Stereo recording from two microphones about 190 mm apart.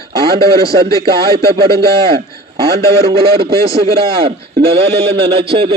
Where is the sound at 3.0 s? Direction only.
30° right (ahead or behind).